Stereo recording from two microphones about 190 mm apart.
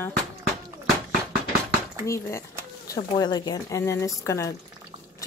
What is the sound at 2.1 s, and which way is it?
Speech, 15° left (ahead or behind).